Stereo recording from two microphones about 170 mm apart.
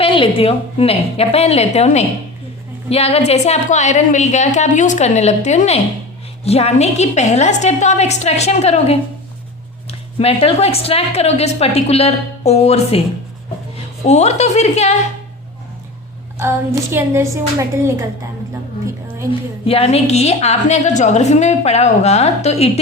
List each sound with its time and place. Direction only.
0.0 s a woman's voice: 30° left (ahead or behind)
10.2 s a woman's voice: 35° left (ahead or behind)
14.1 s a woman's voice: 40° left (ahead or behind)
16.4 s a woman's voice: 15° right (ahead or behind)
19.3 s a woman's voice: 35° left (ahead or behind)